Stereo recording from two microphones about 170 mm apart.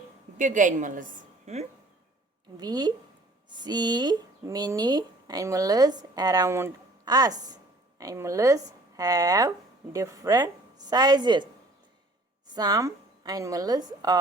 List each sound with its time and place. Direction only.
0.3 s a woman's voice: 50° right (ahead or behind)
2.6 s speech: 25° right (ahead or behind)
12.5 s speech: 20° right (ahead or behind)